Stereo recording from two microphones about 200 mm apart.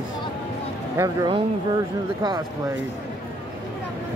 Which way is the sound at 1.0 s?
20° right (ahead or behind).